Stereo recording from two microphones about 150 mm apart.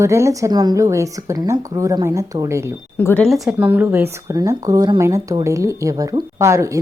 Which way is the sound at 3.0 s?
10° left (ahead or behind).